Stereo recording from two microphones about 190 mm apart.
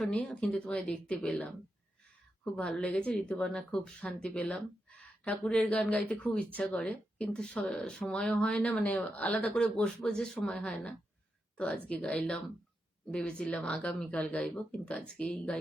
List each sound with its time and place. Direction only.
0.0 s speech: 5° left (ahead or behind)